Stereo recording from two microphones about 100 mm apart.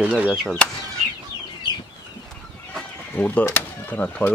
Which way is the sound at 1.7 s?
50° left (ahead or behind).